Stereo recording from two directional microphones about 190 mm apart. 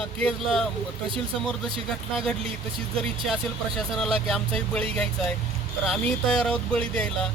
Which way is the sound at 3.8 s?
Centre (ahead or behind).